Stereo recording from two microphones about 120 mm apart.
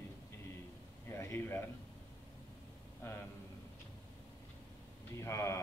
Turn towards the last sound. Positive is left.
turn(degrees=25)  # may be behind; listen again after turning